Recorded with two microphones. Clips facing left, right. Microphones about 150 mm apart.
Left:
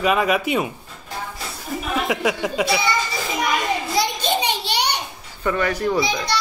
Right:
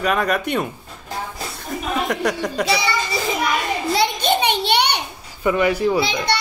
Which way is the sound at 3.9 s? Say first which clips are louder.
Right 4 dB; 60° right (ahead or behind).